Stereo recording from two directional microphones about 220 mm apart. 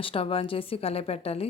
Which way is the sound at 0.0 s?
25° left (ahead or behind).